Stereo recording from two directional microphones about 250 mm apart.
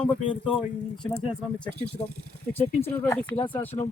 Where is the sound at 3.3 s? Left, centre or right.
Centre.